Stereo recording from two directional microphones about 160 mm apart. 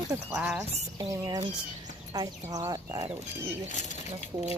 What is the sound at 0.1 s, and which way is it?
Speech, 15° right (ahead or behind).